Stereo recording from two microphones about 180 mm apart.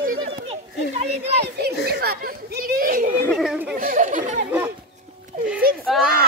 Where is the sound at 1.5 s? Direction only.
60° right (ahead or behind).